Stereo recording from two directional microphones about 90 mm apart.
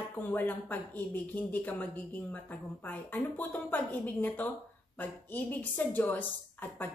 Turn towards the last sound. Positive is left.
turn(degrees=20)  # may be behind; listen again after turning